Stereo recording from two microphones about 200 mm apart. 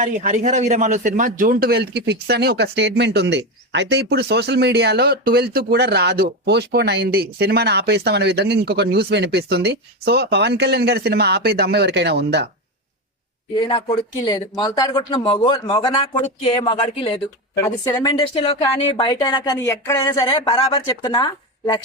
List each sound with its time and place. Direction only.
0.0 s a man's voice: 40° right (ahead or behind); by 12.5 s 55° right (ahead or behind)
13.6 s speech: 25° left (ahead or behind)